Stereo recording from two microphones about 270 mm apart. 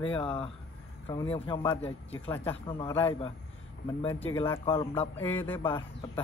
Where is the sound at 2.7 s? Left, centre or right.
Centre.